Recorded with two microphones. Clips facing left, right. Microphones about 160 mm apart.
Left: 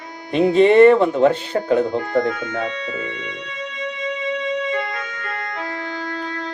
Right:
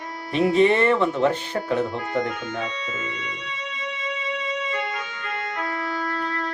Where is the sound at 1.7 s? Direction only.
40° left (ahead or behind).